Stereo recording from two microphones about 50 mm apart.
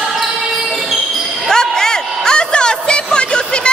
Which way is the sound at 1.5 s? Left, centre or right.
Centre.